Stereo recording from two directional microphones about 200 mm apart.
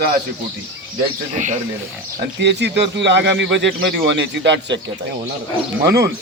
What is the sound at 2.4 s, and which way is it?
Speech, 60° right (ahead or behind).